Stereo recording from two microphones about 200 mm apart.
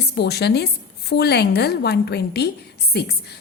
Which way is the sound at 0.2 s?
55° left (ahead or behind).